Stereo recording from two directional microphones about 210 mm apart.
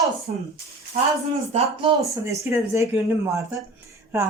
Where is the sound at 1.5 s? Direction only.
25° right (ahead or behind).